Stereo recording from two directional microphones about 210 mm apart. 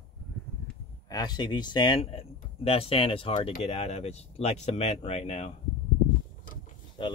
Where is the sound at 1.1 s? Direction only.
20° left (ahead or behind).